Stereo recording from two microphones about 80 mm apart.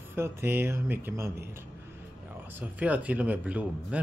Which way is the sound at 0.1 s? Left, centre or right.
Right.